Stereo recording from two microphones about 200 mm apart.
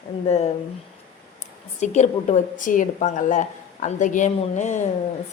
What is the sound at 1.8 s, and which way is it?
A woman's voice, 35° left (ahead or behind).